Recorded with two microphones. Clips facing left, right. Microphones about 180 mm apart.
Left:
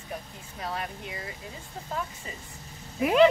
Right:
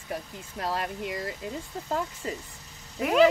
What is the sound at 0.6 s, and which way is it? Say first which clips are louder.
Speech: right 4 dB; 85° right.